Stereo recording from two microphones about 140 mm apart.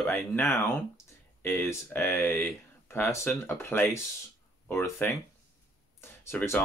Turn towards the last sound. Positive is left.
turn(degrees=15)  # may be behind; listen again after turning